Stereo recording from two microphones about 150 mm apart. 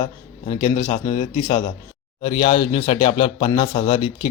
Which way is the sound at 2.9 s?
45° left (ahead or behind).